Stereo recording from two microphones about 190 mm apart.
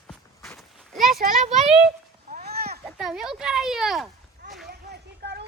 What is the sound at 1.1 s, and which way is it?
Speech, 50° right (ahead or behind).